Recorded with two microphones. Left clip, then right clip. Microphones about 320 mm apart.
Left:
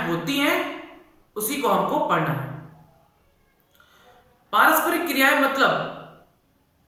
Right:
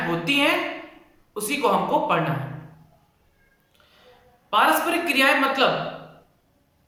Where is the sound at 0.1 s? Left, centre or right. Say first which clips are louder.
Right 3 dB; centre.